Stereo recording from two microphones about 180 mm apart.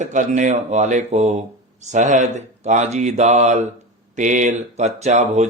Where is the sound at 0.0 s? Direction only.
45° right (ahead or behind).